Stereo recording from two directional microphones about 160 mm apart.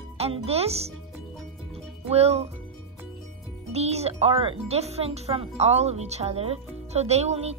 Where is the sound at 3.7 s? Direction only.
40° right (ahead or behind).